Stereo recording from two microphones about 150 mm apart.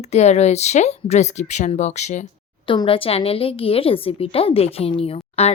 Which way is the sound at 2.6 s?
35° left (ahead or behind).